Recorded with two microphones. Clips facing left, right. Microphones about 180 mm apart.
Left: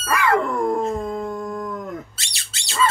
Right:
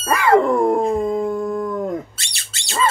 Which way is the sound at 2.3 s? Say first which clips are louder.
Right 5 dB; 50° right (ahead or behind).